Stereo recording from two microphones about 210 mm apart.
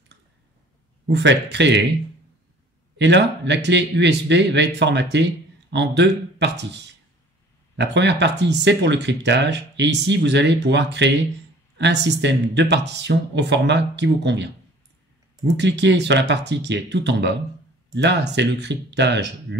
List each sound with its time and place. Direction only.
1.0 s speech: 55° right (ahead or behind)
3.0 s speech: 55° right (ahead or behind)
7.7 s speech: 55° right (ahead or behind)
15.5 s speech: 55° right (ahead or behind)